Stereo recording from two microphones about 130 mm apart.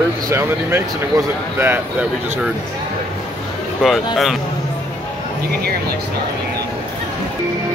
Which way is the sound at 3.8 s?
Centre (ahead or behind).